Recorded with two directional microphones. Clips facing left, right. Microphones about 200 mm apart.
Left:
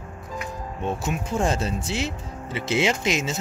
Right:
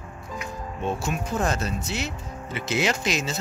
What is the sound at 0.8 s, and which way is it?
Speech, 20° left (ahead or behind).